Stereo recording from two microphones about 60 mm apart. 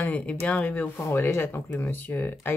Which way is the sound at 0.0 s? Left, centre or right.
Left.